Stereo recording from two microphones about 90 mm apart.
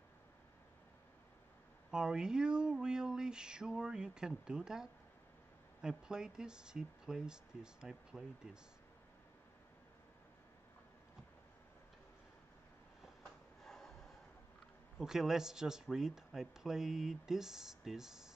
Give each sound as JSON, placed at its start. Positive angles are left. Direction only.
{"t": 1.9, "sound": "speech", "side_deg": -10}
{"t": 13.6, "sound": "a sound", "side_deg": 5}
{"t": 15.0, "sound": "speech", "side_deg": -5}